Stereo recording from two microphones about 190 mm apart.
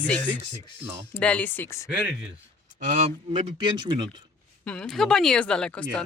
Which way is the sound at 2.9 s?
40° right (ahead or behind).